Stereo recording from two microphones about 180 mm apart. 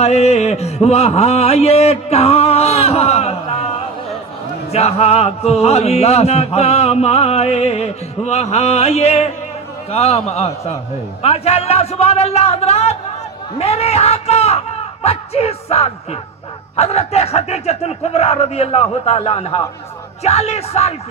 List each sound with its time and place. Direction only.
0.0 s music: 35° left (ahead or behind)
0.8 s a sound: 35° left (ahead or behind)
4.6 s music: 35° left (ahead or behind)
13.6 s a man's voice: 35° left (ahead or behind)
15.0 s music: 35° left (ahead or behind)